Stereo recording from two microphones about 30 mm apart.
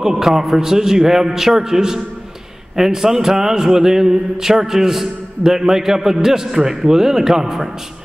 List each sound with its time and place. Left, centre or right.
0.0 s speech: centre